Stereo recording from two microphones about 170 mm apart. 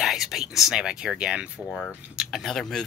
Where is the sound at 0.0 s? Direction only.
Centre (ahead or behind).